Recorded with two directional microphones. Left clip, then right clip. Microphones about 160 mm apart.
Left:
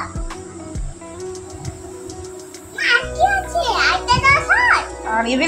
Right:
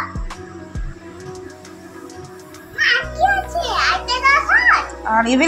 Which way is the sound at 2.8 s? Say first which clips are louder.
Even; 5° left (ahead or behind).